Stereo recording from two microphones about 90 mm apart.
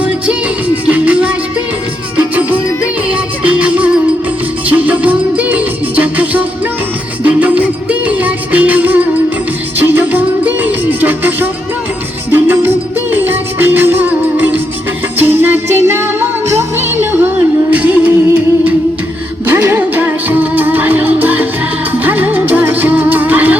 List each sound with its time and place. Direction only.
0.9 s music: 15° right (ahead or behind)
17.7 s music: 15° right (ahead or behind)